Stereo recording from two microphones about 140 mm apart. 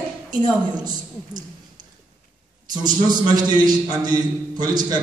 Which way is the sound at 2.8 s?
30° right (ahead or behind).